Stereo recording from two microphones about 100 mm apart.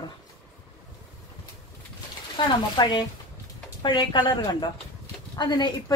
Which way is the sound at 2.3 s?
50° left (ahead or behind).